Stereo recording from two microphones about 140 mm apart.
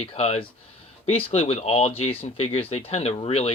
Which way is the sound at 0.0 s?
50° left (ahead or behind).